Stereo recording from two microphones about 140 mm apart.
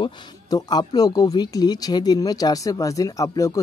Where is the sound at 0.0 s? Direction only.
30° left (ahead or behind).